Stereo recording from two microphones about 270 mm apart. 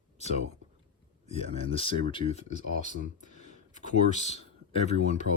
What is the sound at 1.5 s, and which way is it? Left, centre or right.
Speech, left.